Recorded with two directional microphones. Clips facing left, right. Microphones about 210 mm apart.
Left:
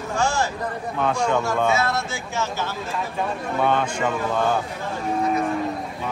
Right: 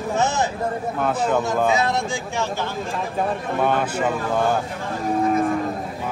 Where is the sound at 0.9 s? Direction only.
5° right (ahead or behind).